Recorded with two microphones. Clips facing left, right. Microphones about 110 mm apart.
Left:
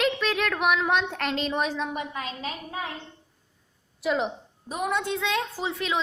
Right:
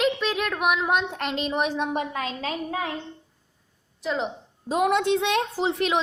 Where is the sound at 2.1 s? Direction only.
90° right.